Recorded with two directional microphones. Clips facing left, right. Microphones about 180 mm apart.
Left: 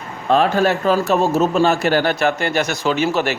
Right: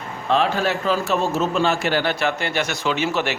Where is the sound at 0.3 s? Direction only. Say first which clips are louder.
Left 5 dB; 45° left (ahead or behind).